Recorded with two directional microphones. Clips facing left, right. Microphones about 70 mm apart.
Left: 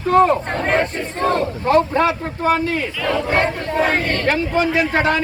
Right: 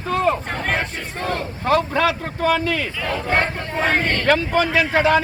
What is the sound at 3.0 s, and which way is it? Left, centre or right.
Speech, right.